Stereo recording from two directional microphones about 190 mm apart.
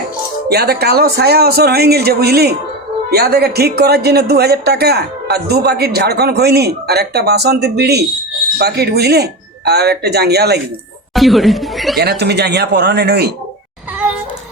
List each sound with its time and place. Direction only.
0.4 s speech: 55° right (ahead or behind)
11.1 s a sound: centre (ahead or behind)
11.9 s speech: 60° right (ahead or behind)